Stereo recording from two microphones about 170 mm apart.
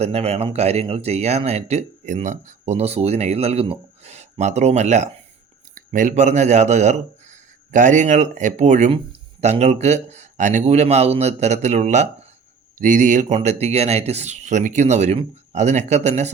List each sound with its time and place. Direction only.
0.0 s speech: 35° right (ahead or behind)